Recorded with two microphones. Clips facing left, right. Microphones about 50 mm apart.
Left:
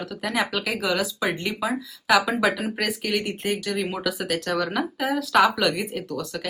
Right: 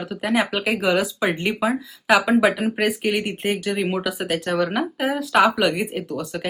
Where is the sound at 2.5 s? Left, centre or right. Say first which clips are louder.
Right 5 dB; centre.